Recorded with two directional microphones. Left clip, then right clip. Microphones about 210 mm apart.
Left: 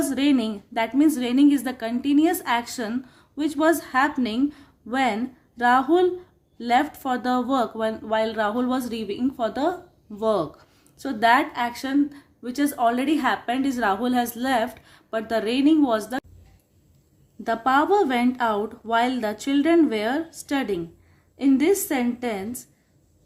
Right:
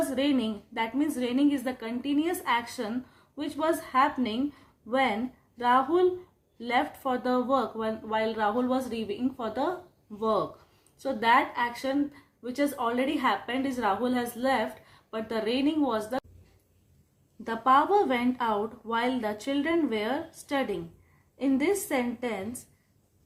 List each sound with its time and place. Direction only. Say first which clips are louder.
0.1 s speech: left 5 dB; 45° left (ahead or behind)
17.4 s speech: left 2 dB; 45° left (ahead or behind)